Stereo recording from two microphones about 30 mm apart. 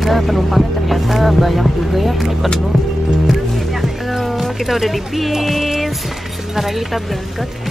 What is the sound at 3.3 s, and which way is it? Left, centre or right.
Music, centre.